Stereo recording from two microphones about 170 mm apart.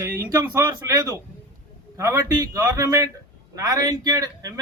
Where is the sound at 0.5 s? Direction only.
20° right (ahead or behind).